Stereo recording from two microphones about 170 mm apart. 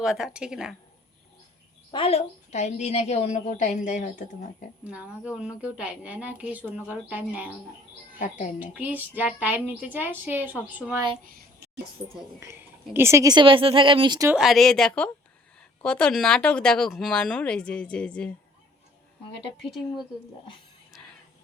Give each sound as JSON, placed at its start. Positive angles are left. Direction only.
{"t": 0.0, "sound": "speech", "side_deg": -5}
{"t": 1.9, "sound": "a woman's voice", "side_deg": 35}
{"t": 4.8, "sound": "a woman's voice", "side_deg": -10}
{"t": 8.2, "sound": "a woman's voice", "side_deg": 50}
{"t": 8.5, "sound": "a woman's voice", "side_deg": -10}
{"t": 11.3, "sound": "a sound", "side_deg": -60}
{"t": 12.4, "sound": "a woman's voice", "side_deg": -15}
{"t": 14.3, "sound": "speech", "side_deg": -5}